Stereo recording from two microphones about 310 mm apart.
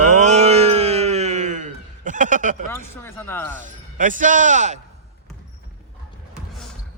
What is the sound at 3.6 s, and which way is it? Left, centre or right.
Speech, right.